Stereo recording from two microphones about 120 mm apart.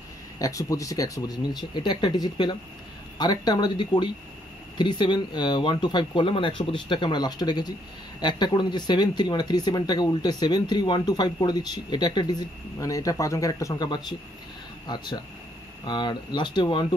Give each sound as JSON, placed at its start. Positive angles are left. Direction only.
{"t": 0.4, "sound": "speech", "side_deg": 30}